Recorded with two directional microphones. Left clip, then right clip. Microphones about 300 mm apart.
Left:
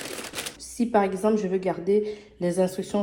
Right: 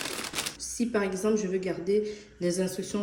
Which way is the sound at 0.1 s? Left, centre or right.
Centre.